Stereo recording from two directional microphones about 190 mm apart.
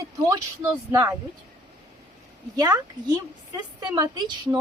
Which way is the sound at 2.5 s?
20° right (ahead or behind).